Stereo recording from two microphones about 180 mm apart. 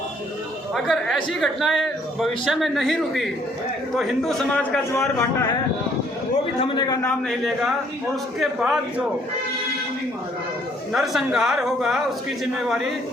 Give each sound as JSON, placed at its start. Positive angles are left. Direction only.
{"t": 0.7, "sound": "speech", "side_deg": 0}
{"t": 4.9, "sound": "a man's voice", "side_deg": 15}
{"t": 6.6, "sound": "a man's voice", "side_deg": 25}
{"t": 7.1, "sound": "speech", "side_deg": 0}
{"t": 10.9, "sound": "speech", "side_deg": 0}